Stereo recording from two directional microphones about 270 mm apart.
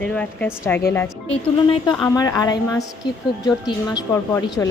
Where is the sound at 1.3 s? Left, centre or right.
Centre.